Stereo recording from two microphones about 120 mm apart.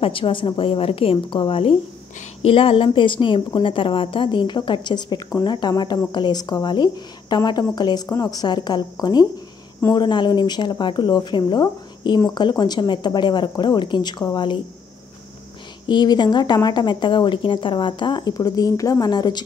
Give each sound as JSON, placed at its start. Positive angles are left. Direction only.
{"t": 0.0, "sound": "a woman's voice", "side_deg": 45}
{"t": 15.9, "sound": "a woman's voice", "side_deg": 40}